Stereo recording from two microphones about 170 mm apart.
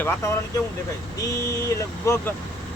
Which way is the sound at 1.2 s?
15° left (ahead or behind).